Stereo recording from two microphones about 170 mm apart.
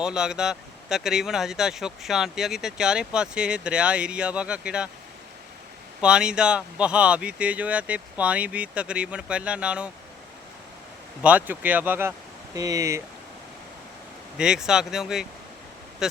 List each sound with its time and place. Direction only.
0.0 s speech: 5° right (ahead or behind)
6.0 s speech: 5° right (ahead or behind)
11.2 s speech: 10° right (ahead or behind)
14.3 s speech: 5° right (ahead or behind)